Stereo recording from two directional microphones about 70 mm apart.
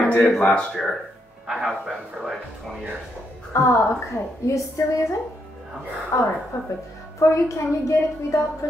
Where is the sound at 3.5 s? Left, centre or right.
Left.